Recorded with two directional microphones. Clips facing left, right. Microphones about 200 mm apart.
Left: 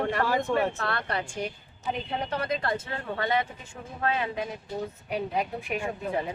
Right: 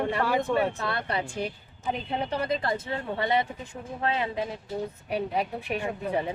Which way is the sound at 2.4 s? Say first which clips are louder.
Right 1 dB; 20° right (ahead or behind).